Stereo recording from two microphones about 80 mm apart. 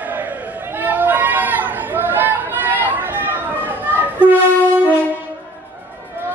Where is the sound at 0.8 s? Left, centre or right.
Right.